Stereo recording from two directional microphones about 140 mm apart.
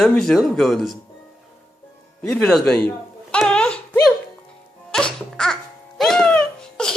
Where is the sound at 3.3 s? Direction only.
5° left (ahead or behind).